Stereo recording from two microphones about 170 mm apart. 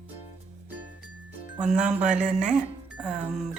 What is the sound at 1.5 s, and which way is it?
Speech, 5° right (ahead or behind).